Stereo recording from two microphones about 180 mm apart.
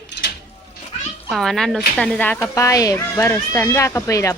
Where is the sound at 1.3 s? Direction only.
Centre (ahead or behind).